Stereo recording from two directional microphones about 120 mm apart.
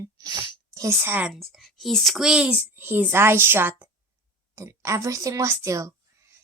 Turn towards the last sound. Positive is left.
turn(degrees=-25)  # may be behind; listen again after turning